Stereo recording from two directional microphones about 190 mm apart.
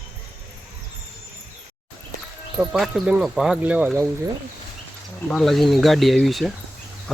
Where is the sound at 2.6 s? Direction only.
Centre (ahead or behind).